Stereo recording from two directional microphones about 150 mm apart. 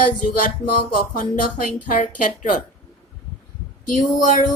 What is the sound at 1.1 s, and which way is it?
Speech, 65° left (ahead or behind).